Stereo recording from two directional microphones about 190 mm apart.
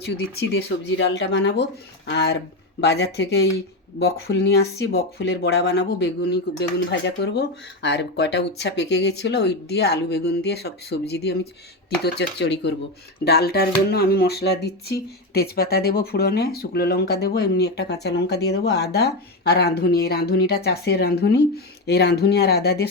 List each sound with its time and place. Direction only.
0.0 s speech: 60° left (ahead or behind)